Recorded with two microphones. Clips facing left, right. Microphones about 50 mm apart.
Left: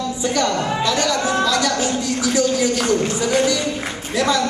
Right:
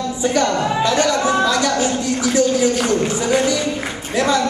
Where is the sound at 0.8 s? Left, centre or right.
Right.